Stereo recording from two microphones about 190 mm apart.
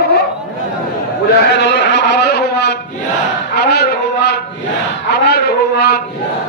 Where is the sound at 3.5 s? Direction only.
60° left (ahead or behind).